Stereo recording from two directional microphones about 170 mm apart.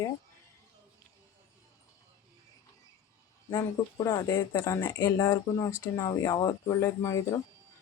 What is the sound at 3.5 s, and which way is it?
Speech, 20° left (ahead or behind).